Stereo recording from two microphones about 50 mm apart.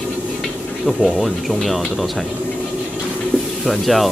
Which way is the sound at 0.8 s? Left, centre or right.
Centre.